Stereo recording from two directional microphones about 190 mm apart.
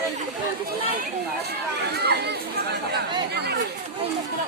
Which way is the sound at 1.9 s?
60° right (ahead or behind).